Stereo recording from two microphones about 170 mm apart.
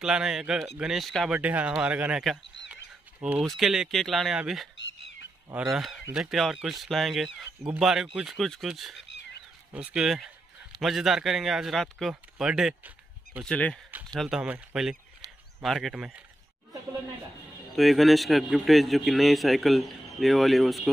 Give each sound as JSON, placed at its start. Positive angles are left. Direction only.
{"t": 0.0, "sound": "a man's voice", "side_deg": -5}
{"t": 9.0, "sound": "a sound", "side_deg": 90}
{"t": 9.9, "sound": "a man's voice", "side_deg": -5}
{"t": 13.5, "sound": "a man's voice", "side_deg": 5}
{"t": 15.2, "sound": "a sound", "side_deg": -20}
{"t": 15.6, "sound": "a man's voice", "side_deg": 0}
{"t": 17.7, "sound": "a man's voice", "side_deg": 0}